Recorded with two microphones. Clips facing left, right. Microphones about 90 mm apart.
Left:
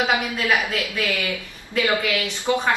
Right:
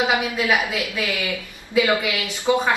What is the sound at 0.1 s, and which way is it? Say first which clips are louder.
A woman's voice: right 1 dB; 10° right (ahead or behind).